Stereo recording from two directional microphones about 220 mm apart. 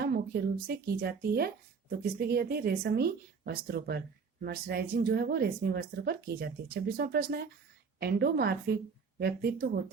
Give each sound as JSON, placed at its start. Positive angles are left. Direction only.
{"t": 0.0, "sound": "speech", "side_deg": -45}